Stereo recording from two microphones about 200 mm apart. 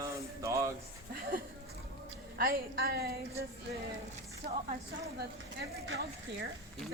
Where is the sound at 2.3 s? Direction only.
50° right (ahead or behind).